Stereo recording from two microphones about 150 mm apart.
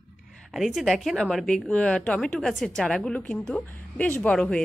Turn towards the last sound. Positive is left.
turn(degrees=5)  # may be behind; listen again after turning